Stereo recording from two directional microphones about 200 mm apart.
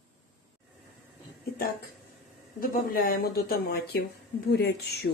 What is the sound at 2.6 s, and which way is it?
A woman's voice, 45° left (ahead or behind).